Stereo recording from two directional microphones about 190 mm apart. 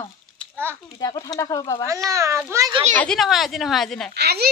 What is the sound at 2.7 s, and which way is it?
Speech, 30° right (ahead or behind).